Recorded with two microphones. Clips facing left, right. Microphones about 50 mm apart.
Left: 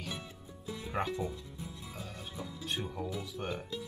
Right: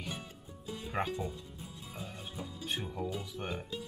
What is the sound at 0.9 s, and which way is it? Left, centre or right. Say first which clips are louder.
Speech: even; centre.